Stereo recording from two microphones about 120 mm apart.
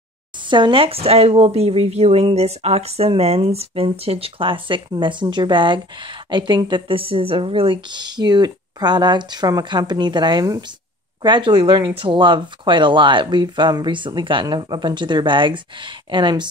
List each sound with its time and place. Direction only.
0.5 s speech: 40° right (ahead or behind)